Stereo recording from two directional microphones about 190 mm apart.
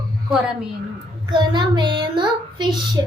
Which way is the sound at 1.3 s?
25° right (ahead or behind).